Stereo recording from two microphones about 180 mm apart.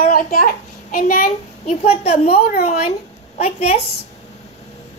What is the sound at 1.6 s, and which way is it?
A woman's voice, 35° left (ahead or behind).